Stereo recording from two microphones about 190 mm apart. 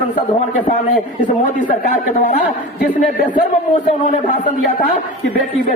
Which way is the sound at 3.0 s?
45° left (ahead or behind).